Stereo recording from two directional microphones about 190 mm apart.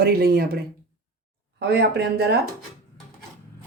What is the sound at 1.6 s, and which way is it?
Speech, 60° right (ahead or behind).